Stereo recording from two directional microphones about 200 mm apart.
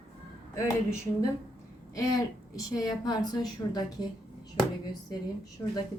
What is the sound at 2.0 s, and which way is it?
A woman's voice, 20° left (ahead or behind).